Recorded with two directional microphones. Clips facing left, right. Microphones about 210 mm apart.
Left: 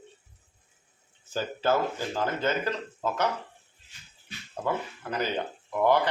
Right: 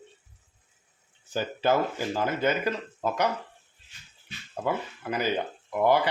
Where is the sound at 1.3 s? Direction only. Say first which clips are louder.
Right 1 dB; 15° right (ahead or behind).